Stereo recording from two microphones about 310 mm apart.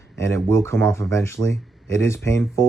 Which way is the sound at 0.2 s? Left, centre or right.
Centre.